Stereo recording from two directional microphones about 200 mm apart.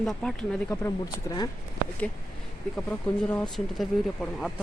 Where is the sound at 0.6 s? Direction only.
15° left (ahead or behind).